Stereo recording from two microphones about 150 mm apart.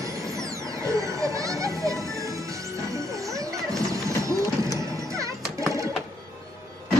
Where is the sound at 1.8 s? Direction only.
20° right (ahead or behind).